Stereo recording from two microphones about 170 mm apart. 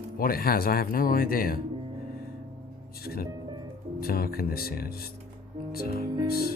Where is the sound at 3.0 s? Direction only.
65° left (ahead or behind).